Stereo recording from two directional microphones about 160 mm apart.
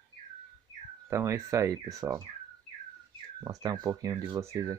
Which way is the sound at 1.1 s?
20° right (ahead or behind).